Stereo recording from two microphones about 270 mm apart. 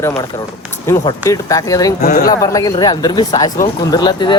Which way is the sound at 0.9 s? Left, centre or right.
Centre.